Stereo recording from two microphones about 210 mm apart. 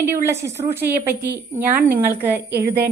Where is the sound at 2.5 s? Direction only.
50° right (ahead or behind).